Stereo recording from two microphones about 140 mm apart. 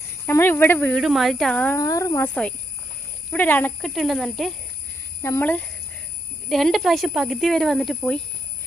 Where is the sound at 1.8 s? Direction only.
25° left (ahead or behind).